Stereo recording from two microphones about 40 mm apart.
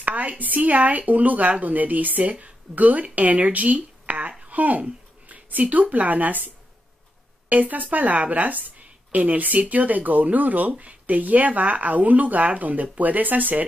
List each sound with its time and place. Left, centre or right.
0.0 s a woman's voice: right